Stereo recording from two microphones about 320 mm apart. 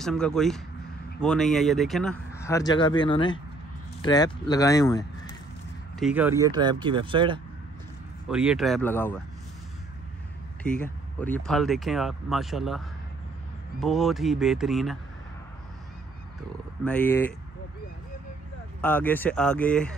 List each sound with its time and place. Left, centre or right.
0.0 s speech: centre
5.9 s speech: centre
8.3 s speech: centre
11.1 s speech: centre
16.8 s speech: centre
18.8 s speech: centre